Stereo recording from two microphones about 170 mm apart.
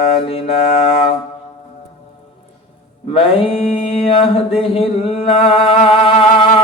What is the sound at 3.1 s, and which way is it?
Mantra, 35° left (ahead or behind).